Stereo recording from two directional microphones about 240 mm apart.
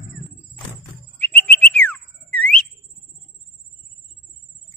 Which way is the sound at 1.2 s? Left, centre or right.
Centre.